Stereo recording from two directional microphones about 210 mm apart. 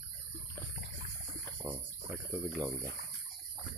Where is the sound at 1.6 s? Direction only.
10° right (ahead or behind).